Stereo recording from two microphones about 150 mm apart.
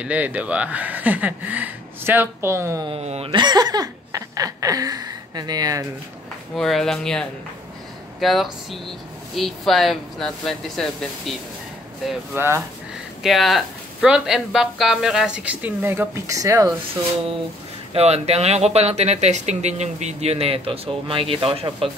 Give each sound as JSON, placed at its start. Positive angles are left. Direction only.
{"t": 0.0, "sound": "speech", "side_deg": -10}
{"t": 2.9, "sound": "speech", "side_deg": -45}
{"t": 3.3, "sound": "speech", "side_deg": -30}
{"t": 6.5, "sound": "speech", "side_deg": 0}
{"t": 12.4, "sound": "speech", "side_deg": -15}
{"t": 13.2, "sound": "speech", "side_deg": 0}
{"t": 17.9, "sound": "speech", "side_deg": -45}